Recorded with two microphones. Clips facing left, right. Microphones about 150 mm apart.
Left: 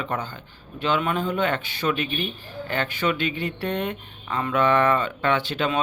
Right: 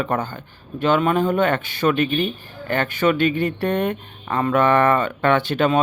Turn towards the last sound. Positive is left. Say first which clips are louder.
# right 6 dB
turn(degrees=-50)  # may be behind; listen again after turning